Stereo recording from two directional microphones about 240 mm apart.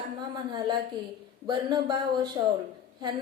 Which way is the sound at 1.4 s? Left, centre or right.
Centre.